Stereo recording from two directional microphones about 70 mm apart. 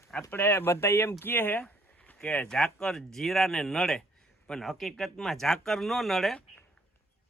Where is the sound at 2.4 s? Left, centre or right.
Centre.